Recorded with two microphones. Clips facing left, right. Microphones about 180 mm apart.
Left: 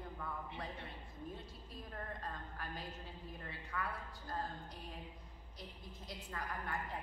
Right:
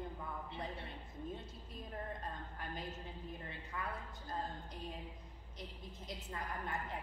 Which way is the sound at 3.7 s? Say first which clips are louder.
Left 2 dB; 20° right (ahead or behind).